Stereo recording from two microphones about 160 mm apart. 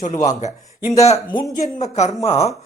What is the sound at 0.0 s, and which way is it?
Speech, 50° left (ahead or behind).